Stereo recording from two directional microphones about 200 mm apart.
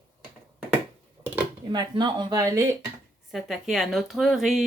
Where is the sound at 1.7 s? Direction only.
20° right (ahead or behind).